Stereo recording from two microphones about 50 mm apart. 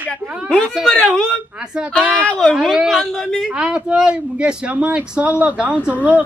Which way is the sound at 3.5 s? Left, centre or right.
Centre.